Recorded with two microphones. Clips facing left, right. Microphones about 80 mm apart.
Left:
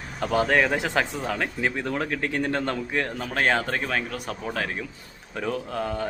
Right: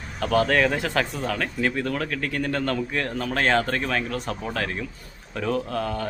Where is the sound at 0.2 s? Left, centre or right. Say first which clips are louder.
Right 1 dB; centre.